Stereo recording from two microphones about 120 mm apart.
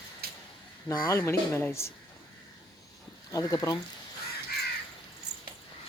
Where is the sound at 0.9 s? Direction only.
25° left (ahead or behind).